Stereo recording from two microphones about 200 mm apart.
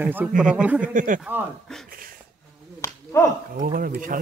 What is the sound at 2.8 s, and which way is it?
Finger snapping, 15° left (ahead or behind).